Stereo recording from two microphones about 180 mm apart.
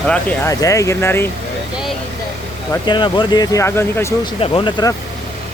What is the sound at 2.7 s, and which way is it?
Speech, 25° left (ahead or behind).